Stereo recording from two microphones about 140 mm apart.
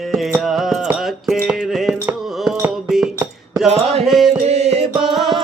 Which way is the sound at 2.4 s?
5° right (ahead or behind).